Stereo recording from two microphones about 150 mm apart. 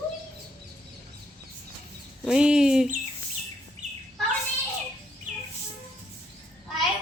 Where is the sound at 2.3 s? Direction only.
5° right (ahead or behind).